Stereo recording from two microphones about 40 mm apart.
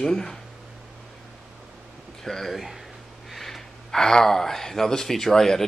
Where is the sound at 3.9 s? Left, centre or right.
Centre.